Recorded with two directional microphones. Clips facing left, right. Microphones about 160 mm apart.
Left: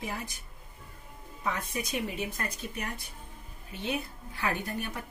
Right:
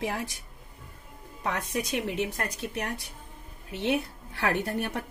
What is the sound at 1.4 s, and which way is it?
A woman's voice, 65° right (ahead or behind).